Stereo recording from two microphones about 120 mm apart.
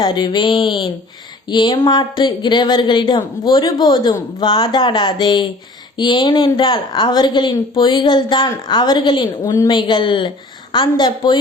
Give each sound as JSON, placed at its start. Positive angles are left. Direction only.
{"t": 0.0, "sound": "a woman's voice", "side_deg": 40}
{"t": 9.4, "sound": "a woman's voice", "side_deg": 30}